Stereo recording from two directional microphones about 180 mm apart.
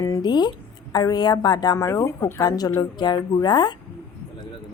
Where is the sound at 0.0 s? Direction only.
20° left (ahead or behind).